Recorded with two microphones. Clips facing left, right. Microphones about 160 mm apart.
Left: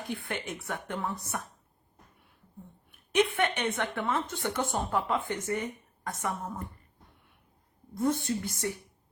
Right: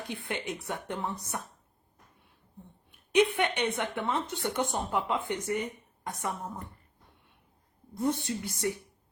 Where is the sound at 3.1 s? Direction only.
15° right (ahead or behind).